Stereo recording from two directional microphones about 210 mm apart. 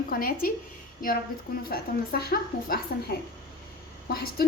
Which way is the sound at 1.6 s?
45° left (ahead or behind).